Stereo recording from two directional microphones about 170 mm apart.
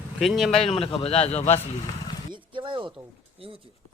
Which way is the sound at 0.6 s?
35° left (ahead or behind).